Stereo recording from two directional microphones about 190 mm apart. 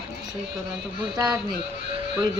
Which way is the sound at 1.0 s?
20° right (ahead or behind).